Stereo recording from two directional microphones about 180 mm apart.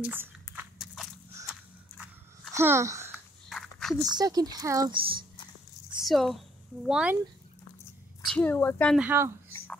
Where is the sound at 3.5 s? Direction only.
Centre (ahead or behind).